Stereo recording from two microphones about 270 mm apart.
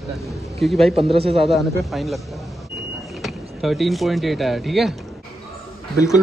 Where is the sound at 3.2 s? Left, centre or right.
Centre.